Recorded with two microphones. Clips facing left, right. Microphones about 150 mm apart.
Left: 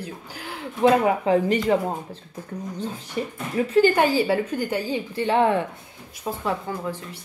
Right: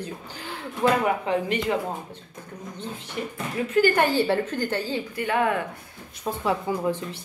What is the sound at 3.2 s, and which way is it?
Speech, 30° left (ahead or behind).